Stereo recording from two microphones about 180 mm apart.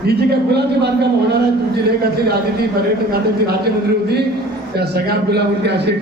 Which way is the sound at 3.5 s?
60° right (ahead or behind).